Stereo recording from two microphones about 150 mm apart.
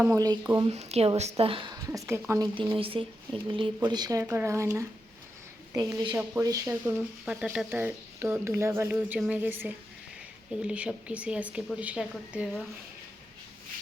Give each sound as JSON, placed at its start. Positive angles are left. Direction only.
{"t": 0.1, "sound": "speech", "side_deg": -20}
{"t": 0.6, "sound": "speech", "side_deg": -45}
{"t": 2.0, "sound": "speech", "side_deg": -15}
{"t": 2.7, "sound": "speech", "side_deg": -35}
{"t": 6.8, "sound": "speech", "side_deg": -5}